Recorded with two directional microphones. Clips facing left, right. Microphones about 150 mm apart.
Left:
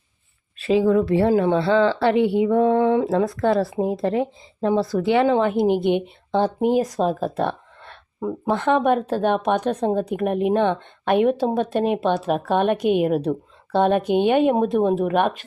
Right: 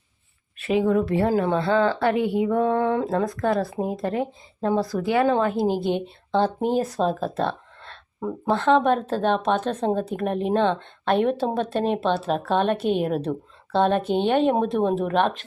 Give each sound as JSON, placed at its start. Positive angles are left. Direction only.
{"t": 0.6, "sound": "speech", "side_deg": 30}